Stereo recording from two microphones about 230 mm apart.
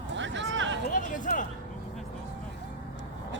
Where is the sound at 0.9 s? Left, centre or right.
Left.